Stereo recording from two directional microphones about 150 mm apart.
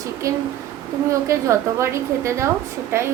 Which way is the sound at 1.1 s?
20° right (ahead or behind).